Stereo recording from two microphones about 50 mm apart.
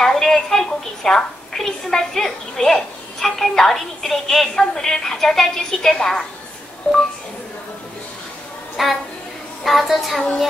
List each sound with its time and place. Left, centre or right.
0.0 s a woman's voice: centre
6.8 s speech: left
8.8 s a woman's voice: centre